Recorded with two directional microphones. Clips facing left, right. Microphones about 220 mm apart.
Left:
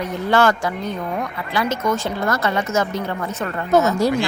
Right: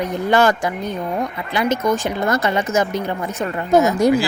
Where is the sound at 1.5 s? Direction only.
15° right (ahead or behind).